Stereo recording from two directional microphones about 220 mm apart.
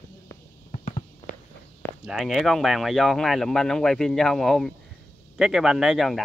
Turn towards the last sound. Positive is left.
turn(degrees=0)  # may be behind; listen again after turning